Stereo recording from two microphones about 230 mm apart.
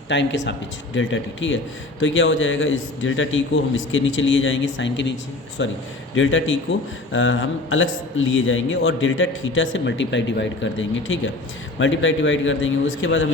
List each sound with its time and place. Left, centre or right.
0.1 s a man's voice: left